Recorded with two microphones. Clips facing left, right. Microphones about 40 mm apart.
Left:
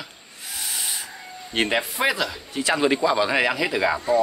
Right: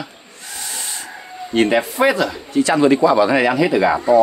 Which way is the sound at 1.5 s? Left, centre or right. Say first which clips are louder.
Right 7 dB; centre.